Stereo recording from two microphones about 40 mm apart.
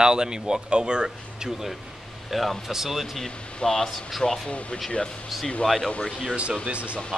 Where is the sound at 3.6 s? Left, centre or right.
Centre.